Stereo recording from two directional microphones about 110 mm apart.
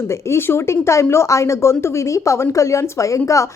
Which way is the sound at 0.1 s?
25° left (ahead or behind).